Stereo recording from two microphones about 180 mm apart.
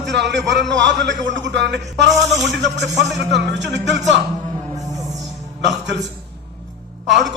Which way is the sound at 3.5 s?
75° right (ahead or behind).